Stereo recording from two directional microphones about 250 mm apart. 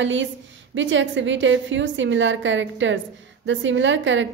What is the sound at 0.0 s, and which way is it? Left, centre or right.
A woman's voice, right.